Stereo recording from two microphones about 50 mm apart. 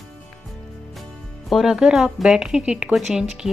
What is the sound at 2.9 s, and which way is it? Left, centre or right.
Speech, centre.